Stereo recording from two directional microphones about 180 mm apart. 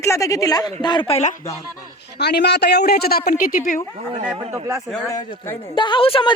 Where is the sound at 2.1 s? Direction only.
65° left (ahead or behind).